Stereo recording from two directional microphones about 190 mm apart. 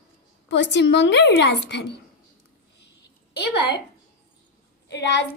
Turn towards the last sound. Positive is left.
turn(degrees=65)  # may be behind; listen again after turning